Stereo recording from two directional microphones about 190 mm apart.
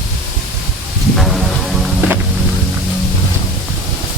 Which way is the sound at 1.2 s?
Centre (ahead or behind).